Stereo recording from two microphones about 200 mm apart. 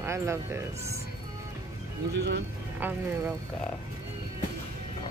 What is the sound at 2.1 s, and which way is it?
Speech, 60° right (ahead or behind).